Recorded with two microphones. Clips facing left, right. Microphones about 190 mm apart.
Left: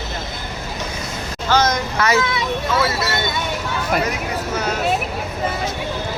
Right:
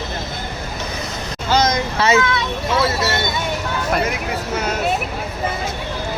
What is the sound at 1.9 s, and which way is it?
Speech, 25° right (ahead or behind).